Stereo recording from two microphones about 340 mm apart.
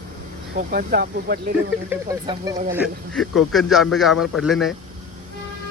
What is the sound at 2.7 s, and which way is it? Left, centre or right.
Speech, centre.